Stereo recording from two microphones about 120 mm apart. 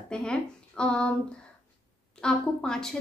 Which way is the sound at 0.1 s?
5° left (ahead or behind).